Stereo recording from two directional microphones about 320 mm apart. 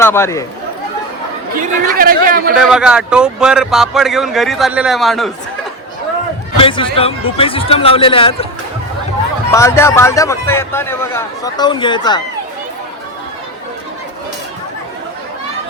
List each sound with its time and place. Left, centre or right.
0.0 s a man's voice: centre
1.5 s a man's voice: right
2.6 s speech: centre
6.6 s a man's voice: centre
9.5 s a man's voice: centre